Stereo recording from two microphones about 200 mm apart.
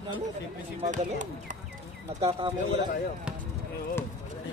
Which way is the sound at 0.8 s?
35° right (ahead or behind).